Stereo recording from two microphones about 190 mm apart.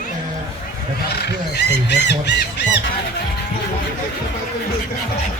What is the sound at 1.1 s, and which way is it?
Speech, 65° left (ahead or behind).